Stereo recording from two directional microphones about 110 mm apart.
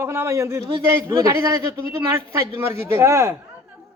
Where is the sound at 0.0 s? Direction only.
20° right (ahead or behind).